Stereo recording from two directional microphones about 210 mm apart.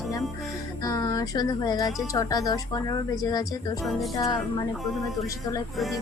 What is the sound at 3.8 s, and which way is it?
Music, centre (ahead or behind).